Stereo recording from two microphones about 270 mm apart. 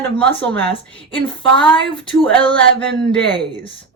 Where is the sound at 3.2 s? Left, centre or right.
Right.